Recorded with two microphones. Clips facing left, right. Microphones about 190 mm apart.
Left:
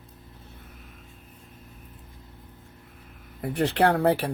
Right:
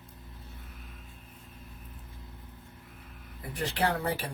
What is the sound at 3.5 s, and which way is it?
Speech, 60° left (ahead or behind).